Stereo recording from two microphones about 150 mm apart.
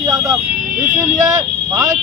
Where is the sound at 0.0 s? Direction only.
25° right (ahead or behind).